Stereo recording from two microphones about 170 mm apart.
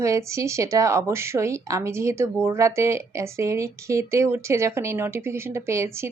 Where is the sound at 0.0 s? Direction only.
15° right (ahead or behind).